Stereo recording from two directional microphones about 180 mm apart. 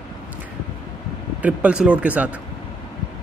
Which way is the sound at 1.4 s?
5° right (ahead or behind).